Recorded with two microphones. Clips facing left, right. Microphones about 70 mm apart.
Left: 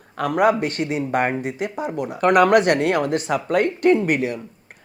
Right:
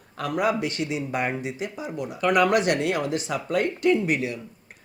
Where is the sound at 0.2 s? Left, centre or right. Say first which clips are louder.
Left 6 dB; left.